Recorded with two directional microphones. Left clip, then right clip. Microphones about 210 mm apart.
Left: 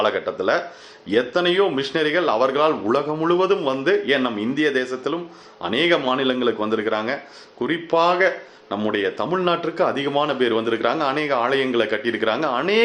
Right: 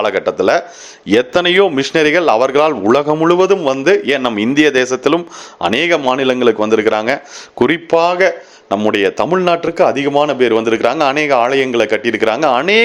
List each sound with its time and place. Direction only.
0.0 s speech: 40° right (ahead or behind)